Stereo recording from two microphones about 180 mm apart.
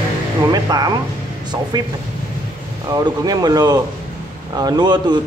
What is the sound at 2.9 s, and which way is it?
Speech, 20° right (ahead or behind).